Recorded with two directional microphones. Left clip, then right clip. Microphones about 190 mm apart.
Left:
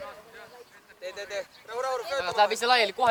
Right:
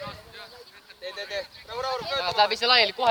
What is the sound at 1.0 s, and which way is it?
Speech, 50° left (ahead or behind).